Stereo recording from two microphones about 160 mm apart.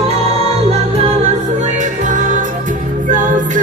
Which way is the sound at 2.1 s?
50° right (ahead or behind).